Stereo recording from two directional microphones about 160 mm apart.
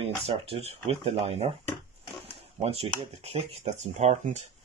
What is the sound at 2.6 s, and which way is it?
Speech, 40° right (ahead or behind).